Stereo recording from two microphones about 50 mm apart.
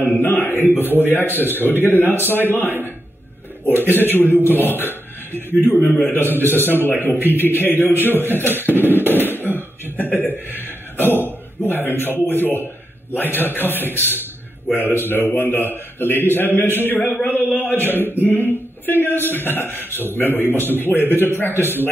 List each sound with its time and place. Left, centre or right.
0.1 s a man's voice: left
5.8 s a man's voice: left
6.1 s a man's voice: left
11.2 s a sound: left
12.3 s a man's voice: left